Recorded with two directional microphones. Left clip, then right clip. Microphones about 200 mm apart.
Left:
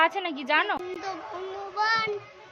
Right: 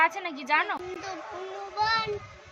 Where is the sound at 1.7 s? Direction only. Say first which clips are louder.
Left 1 dB; 10° right (ahead or behind).